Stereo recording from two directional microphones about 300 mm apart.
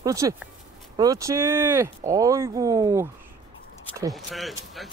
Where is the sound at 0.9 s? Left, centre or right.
Centre.